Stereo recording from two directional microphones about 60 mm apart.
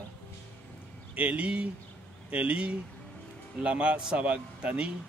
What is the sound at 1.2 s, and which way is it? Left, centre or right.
A man's voice, right.